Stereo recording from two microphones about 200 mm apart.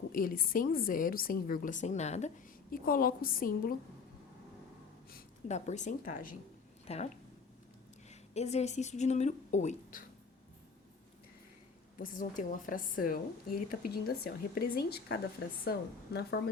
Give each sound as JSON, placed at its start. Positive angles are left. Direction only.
{"t": 0.1, "sound": "a woman's voice", "side_deg": 45}
{"t": 5.5, "sound": "speech", "side_deg": 35}
{"t": 8.1, "sound": "a woman's voice", "side_deg": 35}
{"t": 11.9, "sound": "a woman's voice", "side_deg": 40}